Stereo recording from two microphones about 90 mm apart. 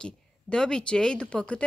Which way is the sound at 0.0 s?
10° left (ahead or behind).